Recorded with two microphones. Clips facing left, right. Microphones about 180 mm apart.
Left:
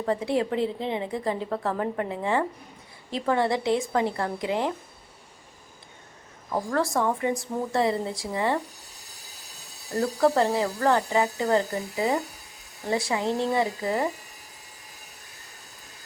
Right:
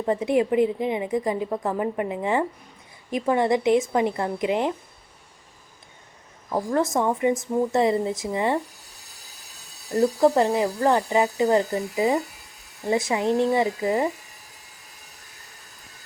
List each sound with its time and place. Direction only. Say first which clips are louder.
0.0 s a woman's voice: right 4 dB; 20° right (ahead or behind)
6.5 s a woman's voice: right 3 dB; 20° right (ahead or behind)
10.0 s a woman's voice: right 3 dB; 20° right (ahead or behind)